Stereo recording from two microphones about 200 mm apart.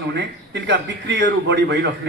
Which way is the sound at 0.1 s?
60° right (ahead or behind).